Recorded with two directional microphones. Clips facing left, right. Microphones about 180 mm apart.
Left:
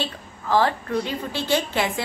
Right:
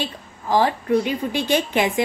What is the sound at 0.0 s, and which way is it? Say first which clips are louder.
A woman's voice: right 1 dB; 15° right (ahead or behind).